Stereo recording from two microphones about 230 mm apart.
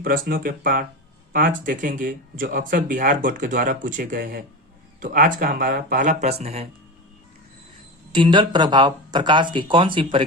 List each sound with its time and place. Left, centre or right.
0.0 s speech: right
8.1 s speech: right